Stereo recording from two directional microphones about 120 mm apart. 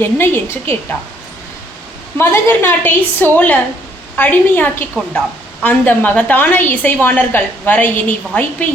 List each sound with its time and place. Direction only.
0.0 s a woman's voice: 20° left (ahead or behind)
2.1 s a woman's voice: 20° left (ahead or behind)